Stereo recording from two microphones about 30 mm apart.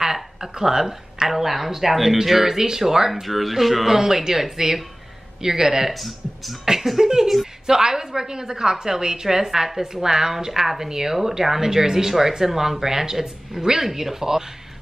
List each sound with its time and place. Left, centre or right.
0.0 s a woman's voice: centre
3.1 s speech: centre
3.8 s speech: centre
5.9 s speech: centre
6.6 s a woman's voice: centre
13.8 s speech: centre